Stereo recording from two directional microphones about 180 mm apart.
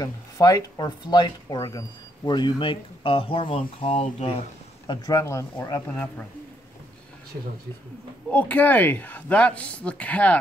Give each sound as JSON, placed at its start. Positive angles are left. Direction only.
{"t": 0.0, "sound": "speech", "side_deg": 20}
{"t": 4.8, "sound": "speech", "side_deg": 20}
{"t": 8.3, "sound": "speech", "side_deg": 10}